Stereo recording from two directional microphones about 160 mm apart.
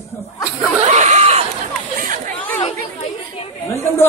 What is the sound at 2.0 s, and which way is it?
Chatter, 50° right (ahead or behind).